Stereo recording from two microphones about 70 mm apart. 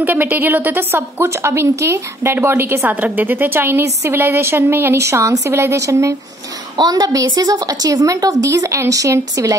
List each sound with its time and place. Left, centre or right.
0.0 s a woman's voice: right
1.2 s a woman's voice: right
3.0 s a woman's voice: right
6.8 s a woman's voice: right